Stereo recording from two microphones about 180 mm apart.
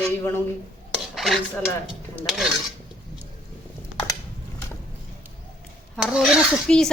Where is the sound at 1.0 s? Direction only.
Centre (ahead or behind).